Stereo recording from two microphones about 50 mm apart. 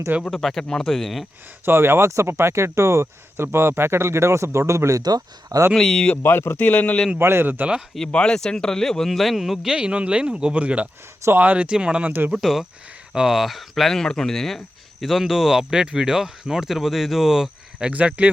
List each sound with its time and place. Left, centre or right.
0.3 s speech: centre
1.6 s speech: right
2.0 s speech: right
5.7 s speech: centre
6.2 s speech: left
6.7 s speech: left
7.2 s speech: right
7.4 s speech: right
8.1 s speech: centre
9.7 s speech: right
12.0 s speech: right
12.3 s speech: centre
15.0 s speech: centre
17.9 s speech: right